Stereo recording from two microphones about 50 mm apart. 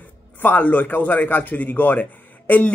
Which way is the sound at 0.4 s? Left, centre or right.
Left.